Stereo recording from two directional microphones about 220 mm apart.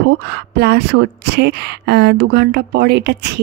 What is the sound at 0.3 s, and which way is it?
A woman's voice, 50° right (ahead or behind).